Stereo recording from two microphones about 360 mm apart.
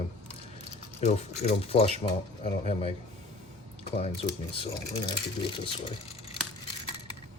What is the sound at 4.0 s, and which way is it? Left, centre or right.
Speech, centre.